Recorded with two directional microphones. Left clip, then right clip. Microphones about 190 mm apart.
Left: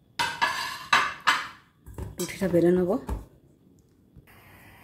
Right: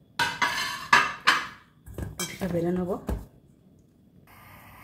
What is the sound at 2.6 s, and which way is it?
Speech, 60° left (ahead or behind).